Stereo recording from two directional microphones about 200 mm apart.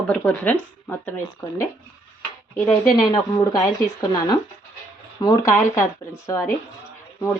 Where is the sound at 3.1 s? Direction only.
20° left (ahead or behind).